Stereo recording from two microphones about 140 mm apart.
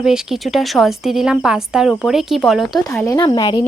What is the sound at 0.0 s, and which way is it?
A woman's voice, 5° right (ahead or behind).